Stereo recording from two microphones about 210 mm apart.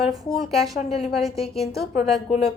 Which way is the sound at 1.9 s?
30° left (ahead or behind).